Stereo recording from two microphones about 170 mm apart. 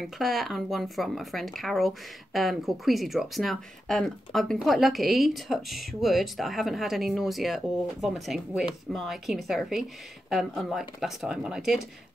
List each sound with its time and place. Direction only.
0.0 s speech: centre (ahead or behind)